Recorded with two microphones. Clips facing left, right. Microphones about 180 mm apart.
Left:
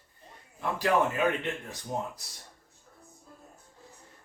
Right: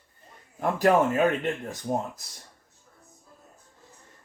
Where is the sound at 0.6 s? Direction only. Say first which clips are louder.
Right 5 dB; 50° right (ahead or behind).